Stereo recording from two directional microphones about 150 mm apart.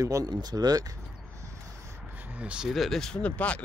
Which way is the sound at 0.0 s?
25° right (ahead or behind).